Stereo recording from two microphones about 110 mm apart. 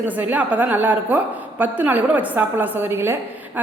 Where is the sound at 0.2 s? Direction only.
15° right (ahead or behind).